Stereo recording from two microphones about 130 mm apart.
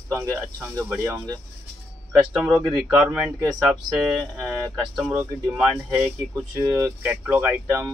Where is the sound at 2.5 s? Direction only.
Centre (ahead or behind).